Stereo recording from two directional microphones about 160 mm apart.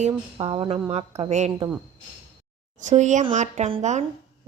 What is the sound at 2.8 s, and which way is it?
A woman's voice, 50° right (ahead or behind).